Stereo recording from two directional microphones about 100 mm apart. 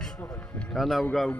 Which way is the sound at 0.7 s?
Centre (ahead or behind).